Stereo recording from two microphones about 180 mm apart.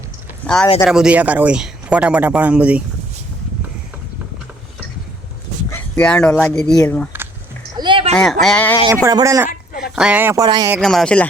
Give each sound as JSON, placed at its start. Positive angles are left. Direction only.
{"t": 0.4, "sound": "a man's voice", "side_deg": 5}
{"t": 5.7, "sound": "speech", "side_deg": 5}
{"t": 7.8, "sound": "a sound", "side_deg": -30}
{"t": 8.1, "sound": "speech", "side_deg": 5}
{"t": 9.0, "sound": "a man's voice", "side_deg": -20}
{"t": 9.5, "sound": "a sound", "side_deg": 55}
{"t": 9.9, "sound": "a man's voice", "side_deg": -5}
{"t": 10.8, "sound": "speech", "side_deg": 5}